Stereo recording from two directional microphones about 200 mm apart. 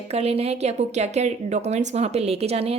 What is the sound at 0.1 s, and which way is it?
A woman's voice, 30° right (ahead or behind).